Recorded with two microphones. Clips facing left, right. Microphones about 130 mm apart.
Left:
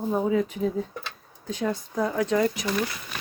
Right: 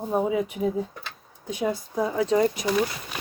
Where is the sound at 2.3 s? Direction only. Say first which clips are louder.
Right 3 dB; 25° right (ahead or behind).